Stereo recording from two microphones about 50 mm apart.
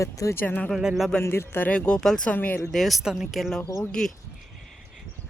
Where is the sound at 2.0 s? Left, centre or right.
Centre.